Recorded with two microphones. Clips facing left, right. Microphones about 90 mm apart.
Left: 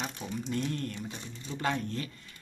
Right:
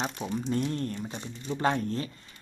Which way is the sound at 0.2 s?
30° right (ahead or behind).